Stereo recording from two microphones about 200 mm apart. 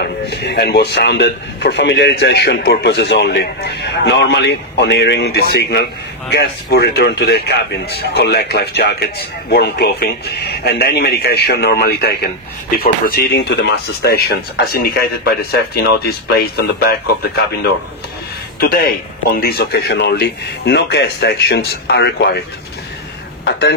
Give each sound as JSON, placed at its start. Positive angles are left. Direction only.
{"t": 0.0, "sound": "a man's voice", "side_deg": 55}
{"t": 18.6, "sound": "speech", "side_deg": 50}